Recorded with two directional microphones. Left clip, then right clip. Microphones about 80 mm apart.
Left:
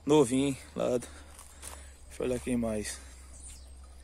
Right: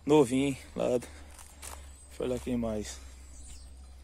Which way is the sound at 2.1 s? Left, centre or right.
Left.